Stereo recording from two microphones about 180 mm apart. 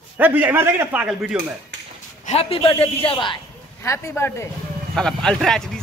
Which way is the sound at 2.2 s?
35° left (ahead or behind).